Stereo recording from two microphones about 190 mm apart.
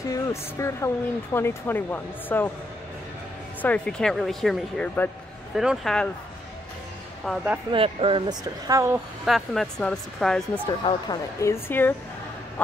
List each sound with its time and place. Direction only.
0.1 s speech: 15° left (ahead or behind)
3.6 s speech: 5° left (ahead or behind)
7.3 s speech: centre (ahead or behind)
7.7 s speech: 30° right (ahead or behind)
9.2 s speech: centre (ahead or behind)
10.8 s speech: 25° left (ahead or behind)
11.4 s speech: 10° left (ahead or behind)